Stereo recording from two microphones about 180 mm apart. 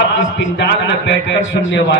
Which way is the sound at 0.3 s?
85° left.